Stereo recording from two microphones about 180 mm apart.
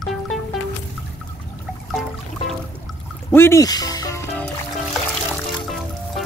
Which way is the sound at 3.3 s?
15° left (ahead or behind).